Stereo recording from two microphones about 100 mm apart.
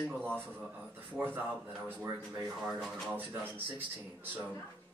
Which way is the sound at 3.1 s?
20° right (ahead or behind).